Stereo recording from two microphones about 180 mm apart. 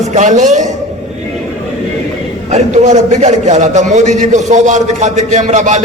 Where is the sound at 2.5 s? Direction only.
40° right (ahead or behind).